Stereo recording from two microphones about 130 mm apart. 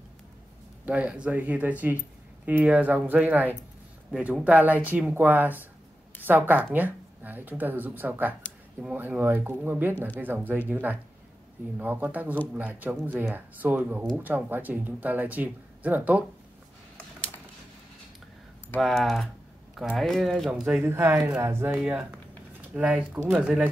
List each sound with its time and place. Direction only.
0.8 s speech: 10° right (ahead or behind)
18.8 s speech: centre (ahead or behind)
20.8 s speech: 20° right (ahead or behind); by 23.6 s centre (ahead or behind)